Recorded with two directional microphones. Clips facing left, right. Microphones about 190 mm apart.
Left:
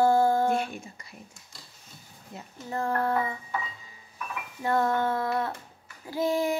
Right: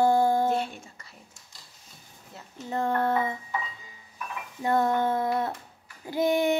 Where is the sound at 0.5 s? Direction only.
10° left (ahead or behind).